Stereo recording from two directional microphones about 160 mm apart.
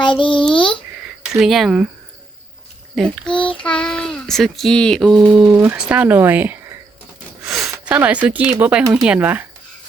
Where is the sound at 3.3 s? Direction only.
30° left (ahead or behind).